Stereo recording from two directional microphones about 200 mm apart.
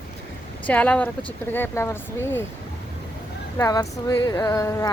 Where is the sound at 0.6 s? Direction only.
5° left (ahead or behind).